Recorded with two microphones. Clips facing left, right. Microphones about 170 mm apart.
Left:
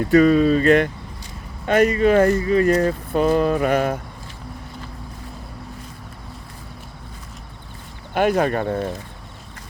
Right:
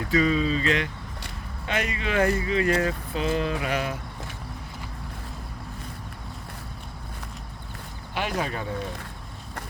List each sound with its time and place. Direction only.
0.1 s speech: 55° left (ahead or behind)
8.1 s speech: 50° left (ahead or behind)